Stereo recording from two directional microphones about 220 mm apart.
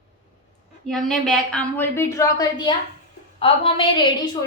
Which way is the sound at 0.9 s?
5° left (ahead or behind).